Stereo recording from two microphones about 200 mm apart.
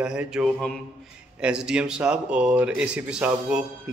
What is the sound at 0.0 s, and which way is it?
Speech, 5° right (ahead or behind).